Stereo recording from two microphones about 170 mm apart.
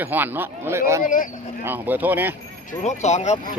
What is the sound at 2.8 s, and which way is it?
Speech, 45° left (ahead or behind).